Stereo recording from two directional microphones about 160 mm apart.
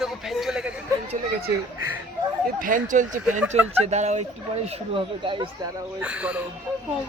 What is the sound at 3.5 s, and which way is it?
Speech, 40° right (ahead or behind).